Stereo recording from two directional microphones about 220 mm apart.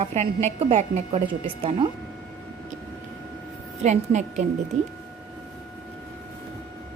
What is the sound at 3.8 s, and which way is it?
Speech, 30° right (ahead or behind).